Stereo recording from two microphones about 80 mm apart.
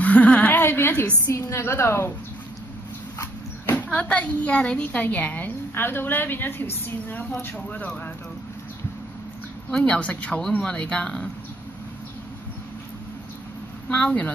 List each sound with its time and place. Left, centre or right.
0.0 s a sound: centre
1.2 s a woman's voice: left
3.7 s a woman's voice: centre
9.7 s a woman's voice: centre
13.8 s a woman's voice: centre